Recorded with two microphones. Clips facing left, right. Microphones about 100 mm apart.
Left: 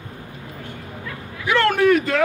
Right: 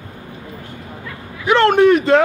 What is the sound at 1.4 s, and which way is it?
Speech, 25° right (ahead or behind).